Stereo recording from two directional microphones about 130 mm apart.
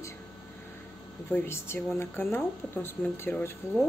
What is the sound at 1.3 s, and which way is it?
Speech, 15° left (ahead or behind).